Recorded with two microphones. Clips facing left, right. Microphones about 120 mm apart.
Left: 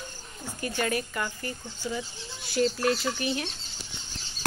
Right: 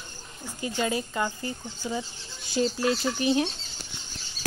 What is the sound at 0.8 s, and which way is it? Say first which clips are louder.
Speech: right 2 dB; 20° right (ahead or behind).